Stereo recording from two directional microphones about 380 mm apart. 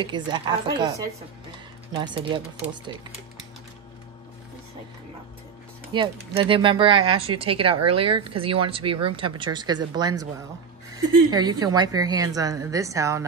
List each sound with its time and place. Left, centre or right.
0.0 s speech: centre
5.9 s speech: centre
11.2 s speech: centre